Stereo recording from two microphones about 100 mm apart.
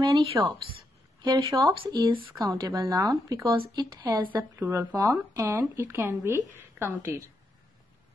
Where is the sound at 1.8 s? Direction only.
55° right (ahead or behind).